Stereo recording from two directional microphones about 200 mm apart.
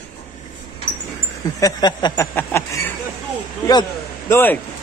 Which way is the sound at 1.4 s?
20° left (ahead or behind).